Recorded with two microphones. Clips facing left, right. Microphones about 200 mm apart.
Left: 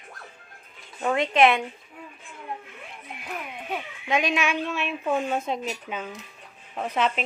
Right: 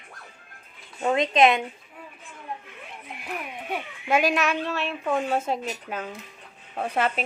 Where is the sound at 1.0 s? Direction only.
20° right (ahead or behind).